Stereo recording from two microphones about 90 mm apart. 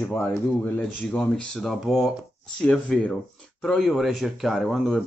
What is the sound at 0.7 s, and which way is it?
Speech, 5° left (ahead or behind).